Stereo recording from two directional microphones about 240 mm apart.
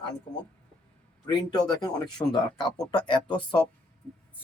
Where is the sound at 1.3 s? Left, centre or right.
Centre.